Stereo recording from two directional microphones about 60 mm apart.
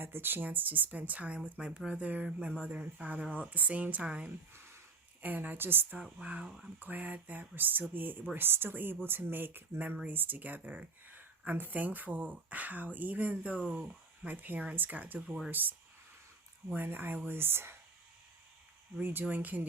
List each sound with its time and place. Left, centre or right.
0.0 s speech: right
1.5 s speech: centre
4.5 s a sound: right
5.2 s speech: right
6.0 s speech: centre
6.7 s speech: right
18.9 s speech: right